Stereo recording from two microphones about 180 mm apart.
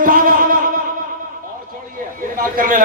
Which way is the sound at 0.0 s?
50° right (ahead or behind).